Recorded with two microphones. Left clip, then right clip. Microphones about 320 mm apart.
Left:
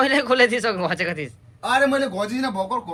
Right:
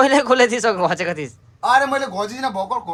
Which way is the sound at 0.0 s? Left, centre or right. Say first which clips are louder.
Right 3 dB; centre.